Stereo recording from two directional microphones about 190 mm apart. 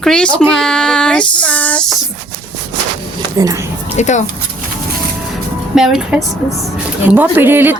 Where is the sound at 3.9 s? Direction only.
40° left (ahead or behind).